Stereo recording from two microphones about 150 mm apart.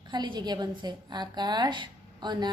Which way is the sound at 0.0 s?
30° right (ahead or behind).